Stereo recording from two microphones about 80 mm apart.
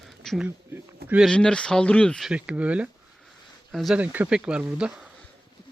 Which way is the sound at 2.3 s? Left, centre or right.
Centre.